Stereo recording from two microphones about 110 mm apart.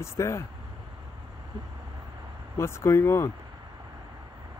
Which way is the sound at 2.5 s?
25° left (ahead or behind).